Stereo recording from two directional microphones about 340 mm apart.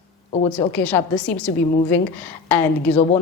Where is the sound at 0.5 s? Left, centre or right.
Centre.